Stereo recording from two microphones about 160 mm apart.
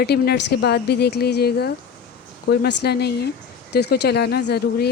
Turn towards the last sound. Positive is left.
turn(degrees=85)